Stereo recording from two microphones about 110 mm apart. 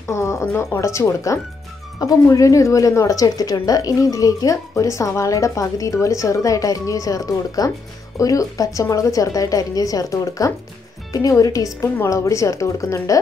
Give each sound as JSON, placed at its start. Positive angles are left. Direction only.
{"t": 0.1, "sound": "a woman's voice", "side_deg": 25}